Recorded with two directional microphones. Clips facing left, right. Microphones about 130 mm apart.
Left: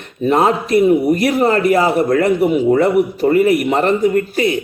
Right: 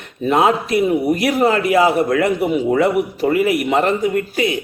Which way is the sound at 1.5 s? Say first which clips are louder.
Left 2 dB; 50° left (ahead or behind).